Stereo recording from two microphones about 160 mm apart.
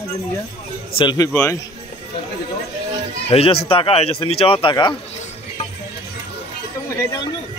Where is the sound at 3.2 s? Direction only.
35° left (ahead or behind).